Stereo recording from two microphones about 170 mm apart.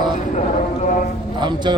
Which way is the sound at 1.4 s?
25° right (ahead or behind).